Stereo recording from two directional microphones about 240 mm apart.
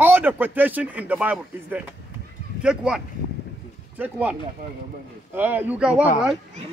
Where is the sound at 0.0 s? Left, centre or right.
Centre.